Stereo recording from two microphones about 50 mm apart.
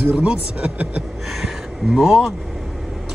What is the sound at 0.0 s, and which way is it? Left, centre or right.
Speech, right.